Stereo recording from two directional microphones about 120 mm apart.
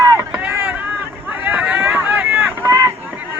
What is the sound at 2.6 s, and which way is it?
Run, 25° right (ahead or behind).